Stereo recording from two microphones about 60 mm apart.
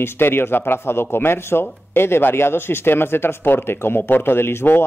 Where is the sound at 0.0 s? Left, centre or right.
Left.